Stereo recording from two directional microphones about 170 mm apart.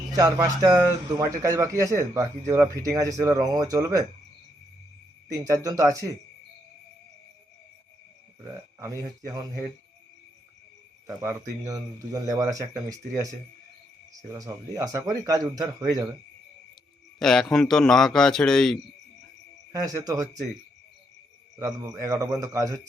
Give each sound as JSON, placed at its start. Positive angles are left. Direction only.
{"t": 0.1, "sound": "a man's voice", "side_deg": -20}
{"t": 5.3, "sound": "a man's voice", "side_deg": -20}
{"t": 8.8, "sound": "a man's voice", "side_deg": -20}
{"t": 11.0, "sound": "a man's voice", "side_deg": -15}
{"t": 17.2, "sound": "a man's voice", "side_deg": 5}
{"t": 19.7, "sound": "a man's voice", "side_deg": -20}
{"t": 21.6, "sound": "a man's voice", "side_deg": -20}